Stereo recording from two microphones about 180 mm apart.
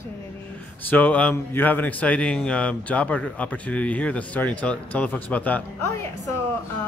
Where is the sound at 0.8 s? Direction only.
10° left (ahead or behind).